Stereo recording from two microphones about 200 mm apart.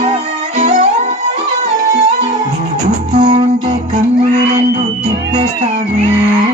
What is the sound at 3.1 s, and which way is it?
Music, 35° right (ahead or behind).